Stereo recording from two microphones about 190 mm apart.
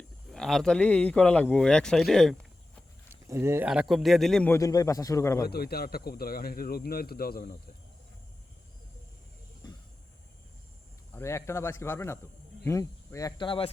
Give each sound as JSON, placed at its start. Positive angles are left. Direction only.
{"t": 0.3, "sound": "a man's voice", "side_deg": 0}
{"t": 3.1, "sound": "speech", "side_deg": -15}
{"t": 3.7, "sound": "a man's voice", "side_deg": 0}
{"t": 5.5, "sound": "speech", "side_deg": 55}
{"t": 11.1, "sound": "a man's voice", "side_deg": 15}